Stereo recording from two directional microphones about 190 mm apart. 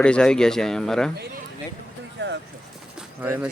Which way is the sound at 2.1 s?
65° right (ahead or behind).